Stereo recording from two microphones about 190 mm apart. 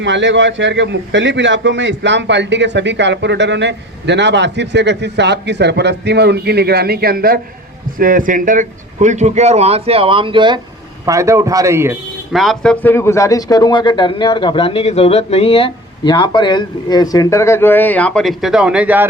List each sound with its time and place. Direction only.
0.0 s a man's voice: 70° right (ahead or behind); by 11.9 s 15° right (ahead or behind)
12.3 s speech: centre (ahead or behind)